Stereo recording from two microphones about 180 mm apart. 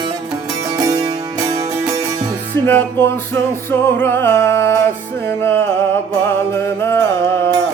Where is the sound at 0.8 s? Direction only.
20° right (ahead or behind).